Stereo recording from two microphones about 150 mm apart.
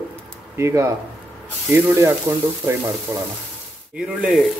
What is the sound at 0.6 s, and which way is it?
Speech, 20° right (ahead or behind).